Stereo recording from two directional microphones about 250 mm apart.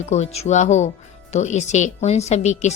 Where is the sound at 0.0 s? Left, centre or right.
Left.